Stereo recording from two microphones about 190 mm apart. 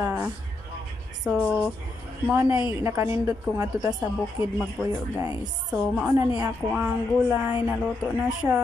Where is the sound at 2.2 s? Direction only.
10° right (ahead or behind).